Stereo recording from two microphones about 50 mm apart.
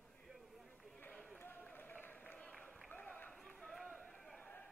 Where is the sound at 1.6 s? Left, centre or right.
Left.